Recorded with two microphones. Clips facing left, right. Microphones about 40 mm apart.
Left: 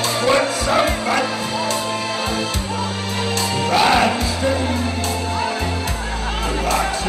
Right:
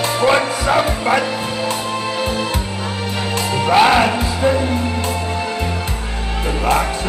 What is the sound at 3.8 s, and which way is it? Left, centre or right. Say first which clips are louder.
Music: right 3 dB; centre.